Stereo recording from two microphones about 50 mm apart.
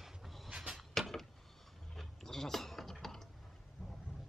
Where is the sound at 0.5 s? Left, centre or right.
Centre.